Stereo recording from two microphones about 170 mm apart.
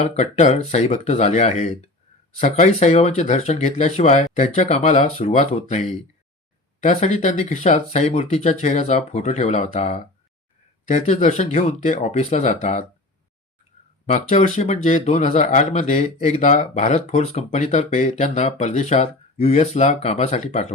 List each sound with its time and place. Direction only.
0.0 s speech: 45° left (ahead or behind)
14.1 s speech: 45° left (ahead or behind)